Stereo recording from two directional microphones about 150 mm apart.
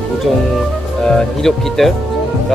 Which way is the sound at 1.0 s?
5° left (ahead or behind).